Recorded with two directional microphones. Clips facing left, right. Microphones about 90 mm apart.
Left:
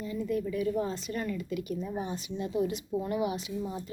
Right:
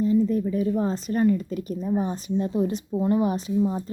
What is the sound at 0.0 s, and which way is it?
Speech, 35° right (ahead or behind).